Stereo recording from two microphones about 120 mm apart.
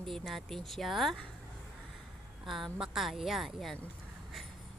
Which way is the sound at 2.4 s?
Centre (ahead or behind).